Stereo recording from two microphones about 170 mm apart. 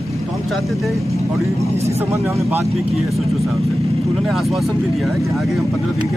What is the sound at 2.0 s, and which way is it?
Speech, 15° right (ahead or behind).